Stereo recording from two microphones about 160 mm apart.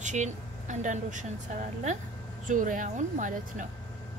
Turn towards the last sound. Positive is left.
turn(degrees=-50)  # may be behind; listen again after turning